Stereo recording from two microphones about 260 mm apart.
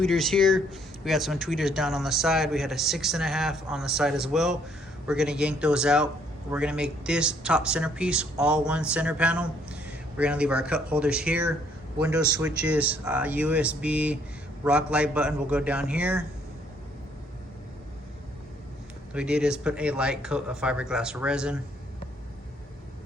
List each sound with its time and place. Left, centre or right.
0.0 s speech: centre
19.1 s speech: centre